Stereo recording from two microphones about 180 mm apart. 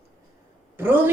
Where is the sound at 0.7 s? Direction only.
10° right (ahead or behind).